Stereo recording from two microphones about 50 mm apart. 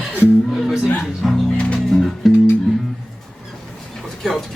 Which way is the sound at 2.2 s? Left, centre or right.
Centre.